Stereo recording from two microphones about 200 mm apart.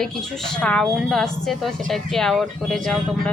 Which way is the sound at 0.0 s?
5° left (ahead or behind).